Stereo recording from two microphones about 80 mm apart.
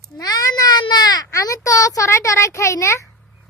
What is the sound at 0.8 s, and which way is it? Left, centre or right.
Baby cry, left.